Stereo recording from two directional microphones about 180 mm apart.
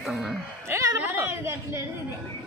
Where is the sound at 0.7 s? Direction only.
15° right (ahead or behind).